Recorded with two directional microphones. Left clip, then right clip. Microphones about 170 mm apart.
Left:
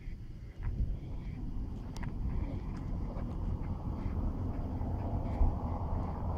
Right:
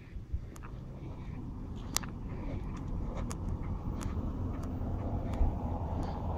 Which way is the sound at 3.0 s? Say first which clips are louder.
Right 2 dB; 20° right (ahead or behind).